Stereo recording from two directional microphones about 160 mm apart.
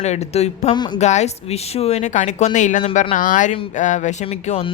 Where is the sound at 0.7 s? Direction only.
25° left (ahead or behind).